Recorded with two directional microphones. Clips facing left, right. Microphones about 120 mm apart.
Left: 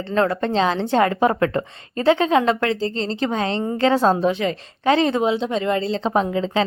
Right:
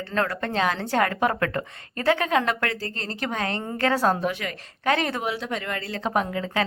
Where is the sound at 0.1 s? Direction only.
25° left (ahead or behind).